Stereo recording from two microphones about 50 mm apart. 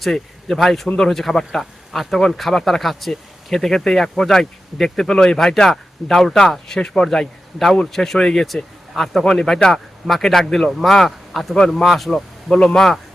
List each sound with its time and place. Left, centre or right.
0.0 s a man's voice: centre
12.5 s speech: centre